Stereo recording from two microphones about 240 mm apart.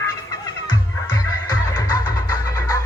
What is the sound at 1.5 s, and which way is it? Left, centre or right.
Music, centre.